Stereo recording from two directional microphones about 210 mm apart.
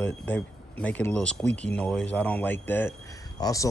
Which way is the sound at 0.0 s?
5° left (ahead or behind).